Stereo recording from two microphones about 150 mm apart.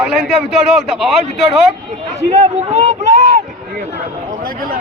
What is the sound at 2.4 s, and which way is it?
Speech, 50° right (ahead or behind).